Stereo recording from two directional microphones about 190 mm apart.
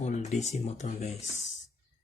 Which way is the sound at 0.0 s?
35° left (ahead or behind).